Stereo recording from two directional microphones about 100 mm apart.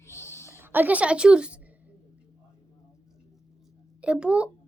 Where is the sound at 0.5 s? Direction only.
20° right (ahead or behind).